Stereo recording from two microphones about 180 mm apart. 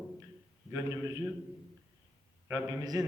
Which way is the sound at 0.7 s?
20° right (ahead or behind).